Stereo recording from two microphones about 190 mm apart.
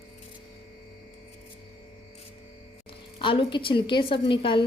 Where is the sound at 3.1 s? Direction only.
25° left (ahead or behind).